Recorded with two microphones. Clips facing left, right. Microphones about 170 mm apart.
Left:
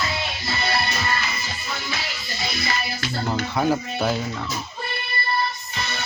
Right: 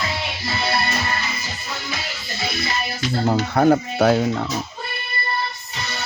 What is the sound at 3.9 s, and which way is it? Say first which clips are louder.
Speech: right 7 dB; 80° right.